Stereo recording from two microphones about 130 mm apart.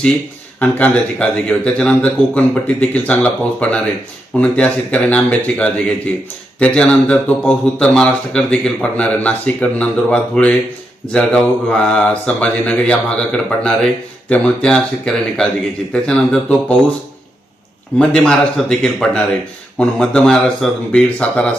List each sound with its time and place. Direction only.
0.6 s speech: 10° left (ahead or behind)
17.9 s speech: 5° left (ahead or behind)